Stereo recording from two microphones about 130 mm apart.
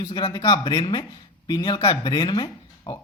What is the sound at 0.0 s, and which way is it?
A man's voice, 35° left (ahead or behind).